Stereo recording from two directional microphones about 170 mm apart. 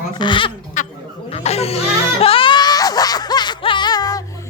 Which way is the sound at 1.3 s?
35° left (ahead or behind).